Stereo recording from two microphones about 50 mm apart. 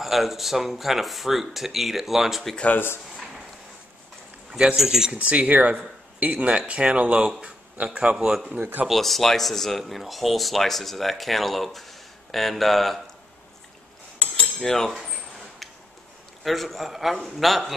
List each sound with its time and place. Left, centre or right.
0.0 s speech: centre
2.7 s speech: left
4.7 s speech: centre
5.1 s speech: right
7.2 s speech: centre
7.7 s speech: right
8.2 s speech: centre
8.5 s speech: right
8.8 s speech: centre
14.1 s cutlery: left
14.6 s speech: centre
16.4 s speech: centre